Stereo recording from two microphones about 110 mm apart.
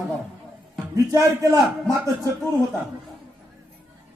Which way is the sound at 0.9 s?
30° right (ahead or behind).